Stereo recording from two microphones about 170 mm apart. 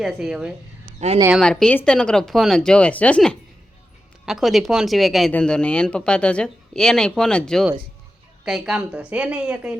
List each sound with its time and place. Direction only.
0.0 s speech: centre (ahead or behind)
0.9 s speech: 40° right (ahead or behind)
1.3 s a woman's voice: 5° left (ahead or behind)